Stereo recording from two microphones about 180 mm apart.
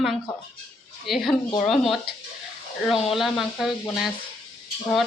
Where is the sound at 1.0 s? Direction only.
Centre (ahead or behind).